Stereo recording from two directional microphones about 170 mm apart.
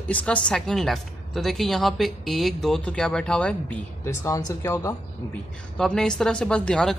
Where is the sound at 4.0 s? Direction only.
15° left (ahead or behind).